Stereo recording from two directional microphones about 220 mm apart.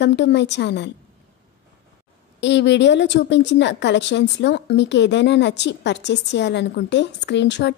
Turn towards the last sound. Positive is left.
turn(degrees=50)  # may be behind; listen again after turning